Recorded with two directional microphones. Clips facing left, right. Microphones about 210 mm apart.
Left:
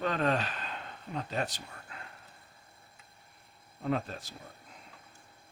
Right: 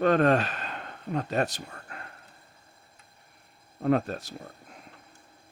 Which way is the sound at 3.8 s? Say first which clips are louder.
Right 8 dB; 55° right (ahead or behind).